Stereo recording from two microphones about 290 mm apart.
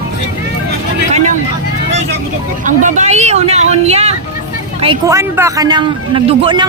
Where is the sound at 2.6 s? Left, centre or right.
Right.